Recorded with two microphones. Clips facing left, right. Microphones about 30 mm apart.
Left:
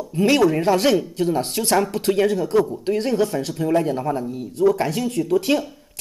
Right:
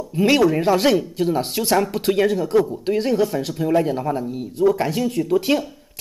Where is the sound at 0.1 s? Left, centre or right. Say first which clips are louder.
Right 1 dB; centre.